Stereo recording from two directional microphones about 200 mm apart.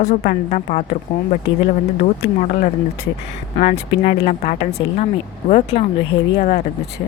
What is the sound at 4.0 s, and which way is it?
Speech, 35° left (ahead or behind).